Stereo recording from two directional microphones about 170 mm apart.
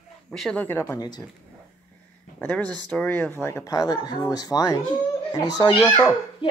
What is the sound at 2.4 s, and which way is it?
Speech, 10° left (ahead or behind).